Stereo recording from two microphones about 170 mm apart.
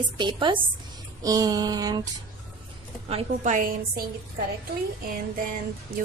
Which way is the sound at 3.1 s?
40° right (ahead or behind).